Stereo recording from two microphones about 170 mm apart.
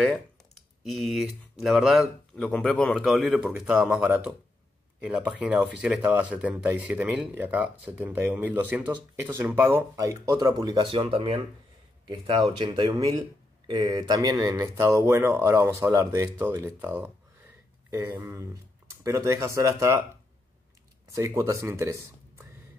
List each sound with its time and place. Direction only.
0.8 s speech: centre (ahead or behind); by 20.0 s 15° right (ahead or behind)
21.2 s speech: 15° right (ahead or behind)